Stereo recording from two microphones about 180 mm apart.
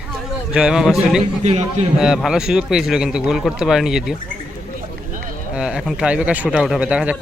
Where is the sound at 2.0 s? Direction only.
5° right (ahead or behind).